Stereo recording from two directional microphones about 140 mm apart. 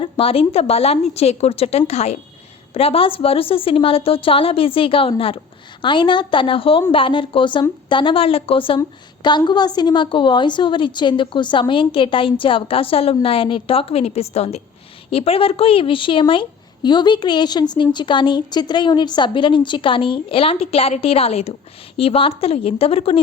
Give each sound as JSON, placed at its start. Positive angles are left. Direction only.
{"t": 0.0, "sound": "a woman's voice", "side_deg": 40}
{"t": 8.8, "sound": "a woman's voice", "side_deg": 30}